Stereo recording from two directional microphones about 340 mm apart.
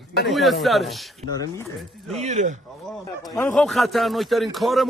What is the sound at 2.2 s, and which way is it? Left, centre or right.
Speech, centre.